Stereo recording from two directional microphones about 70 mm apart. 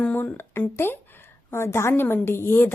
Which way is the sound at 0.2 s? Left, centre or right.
Left.